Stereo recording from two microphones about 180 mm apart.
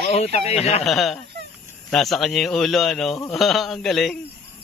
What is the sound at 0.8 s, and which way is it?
Speech, centre (ahead or behind).